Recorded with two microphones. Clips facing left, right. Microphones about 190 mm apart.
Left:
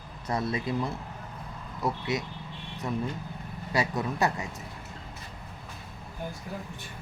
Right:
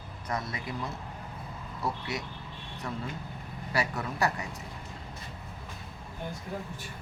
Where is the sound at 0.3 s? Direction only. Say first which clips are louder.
Left 5 dB; 30° left (ahead or behind).